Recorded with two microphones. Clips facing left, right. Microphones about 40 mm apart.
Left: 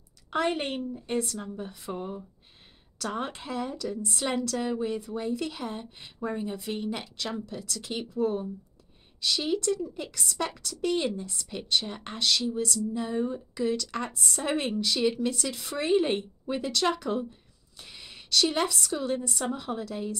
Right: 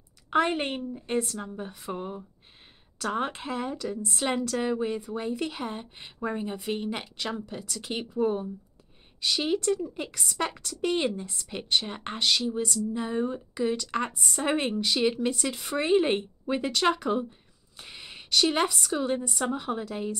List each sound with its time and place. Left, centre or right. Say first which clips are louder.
0.3 s a woman's voice: right 3 dB; right